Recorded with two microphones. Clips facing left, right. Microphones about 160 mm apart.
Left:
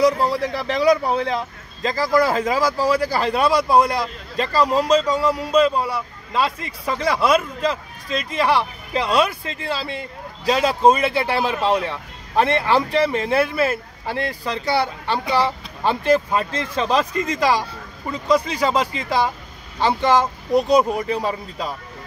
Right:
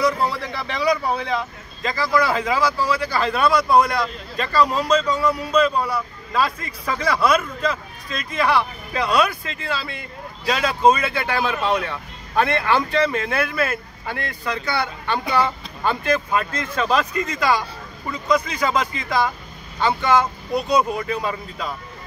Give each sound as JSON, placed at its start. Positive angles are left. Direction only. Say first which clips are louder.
{"t": 0.0, "sound": "speech", "louder": "left 4 dB", "side_deg": 40}
{"t": 21.1, "sound": "speech", "louder": "left 2 dB", "side_deg": 35}